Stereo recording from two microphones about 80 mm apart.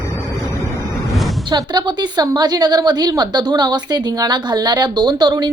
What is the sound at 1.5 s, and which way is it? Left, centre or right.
Speech, right.